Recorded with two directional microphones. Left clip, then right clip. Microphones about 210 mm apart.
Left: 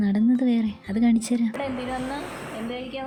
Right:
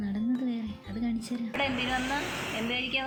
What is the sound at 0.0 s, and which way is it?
Music, 45° left (ahead or behind).